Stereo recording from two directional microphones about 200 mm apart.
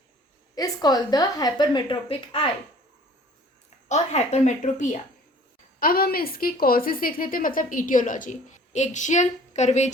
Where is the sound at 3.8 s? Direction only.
35° left (ahead or behind).